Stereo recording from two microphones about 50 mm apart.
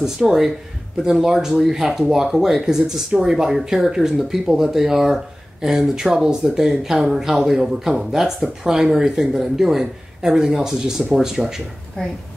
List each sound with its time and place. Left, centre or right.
0.0 s speech: centre
12.0 s speech: centre